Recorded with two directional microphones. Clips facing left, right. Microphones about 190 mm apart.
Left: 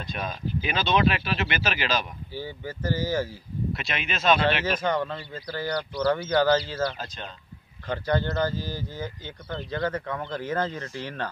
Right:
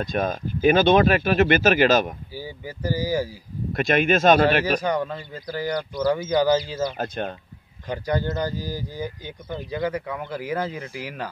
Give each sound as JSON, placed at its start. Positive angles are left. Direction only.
{"t": 0.0, "sound": "speech", "side_deg": -45}
{"t": 2.3, "sound": "speech", "side_deg": -10}
{"t": 3.7, "sound": "speech", "side_deg": -50}
{"t": 4.8, "sound": "speech", "side_deg": -10}
{"t": 7.0, "sound": "speech", "side_deg": -55}
{"t": 7.8, "sound": "speech", "side_deg": -15}